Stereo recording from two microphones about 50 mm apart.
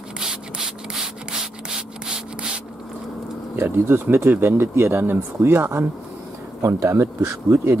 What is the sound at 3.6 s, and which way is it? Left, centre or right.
Speech, right.